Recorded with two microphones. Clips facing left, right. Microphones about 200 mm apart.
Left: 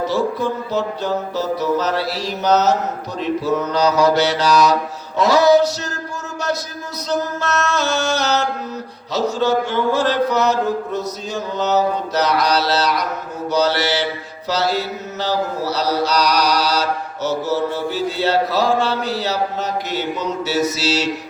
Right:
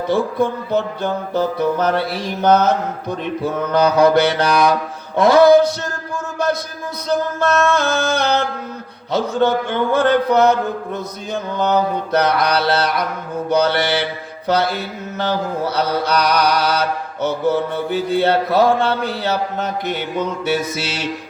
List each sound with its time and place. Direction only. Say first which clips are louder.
0.1 s mantra: right 2 dB; 55° right (ahead or behind)
7.1 s mantra: right 3 dB; 55° right (ahead or behind)